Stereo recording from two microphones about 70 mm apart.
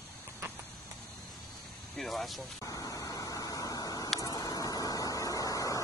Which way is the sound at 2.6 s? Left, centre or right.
Left.